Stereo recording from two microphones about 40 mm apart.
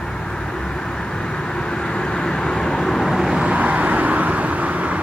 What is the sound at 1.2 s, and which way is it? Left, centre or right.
Vehicle, centre.